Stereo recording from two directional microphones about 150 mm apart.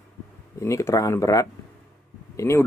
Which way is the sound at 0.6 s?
20° left (ahead or behind).